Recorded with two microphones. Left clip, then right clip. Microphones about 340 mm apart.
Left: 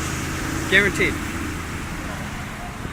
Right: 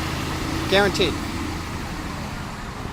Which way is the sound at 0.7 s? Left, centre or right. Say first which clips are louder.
Left 1 dB; centre.